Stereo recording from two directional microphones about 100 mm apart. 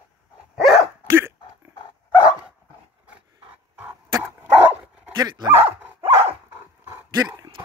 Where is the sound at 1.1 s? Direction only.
25° right (ahead or behind).